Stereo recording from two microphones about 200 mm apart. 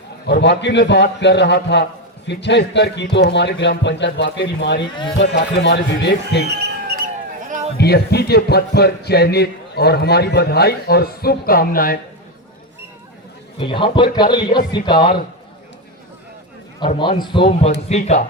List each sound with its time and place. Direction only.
0.3 s a man's voice: 55° left (ahead or behind)
6.5 s basketball bounce: 55° right (ahead or behind)
7.4 s a sound: 40° right (ahead or behind)
7.8 s a man's voice: 55° left (ahead or behind)
13.6 s a man's voice: 25° left (ahead or behind)
17.0 s a man's voice: 25° left (ahead or behind)
17.8 s speech: 35° left (ahead or behind)